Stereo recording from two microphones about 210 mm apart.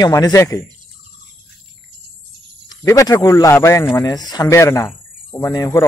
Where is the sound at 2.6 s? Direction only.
15° left (ahead or behind).